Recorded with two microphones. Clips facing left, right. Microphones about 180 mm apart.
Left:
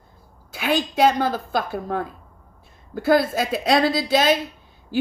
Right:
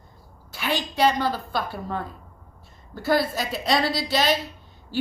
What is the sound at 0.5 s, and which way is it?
A child's voice, 50° left (ahead or behind).